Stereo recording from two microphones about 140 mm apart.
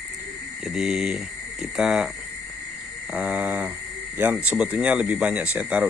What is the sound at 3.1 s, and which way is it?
Speech, 10° right (ahead or behind).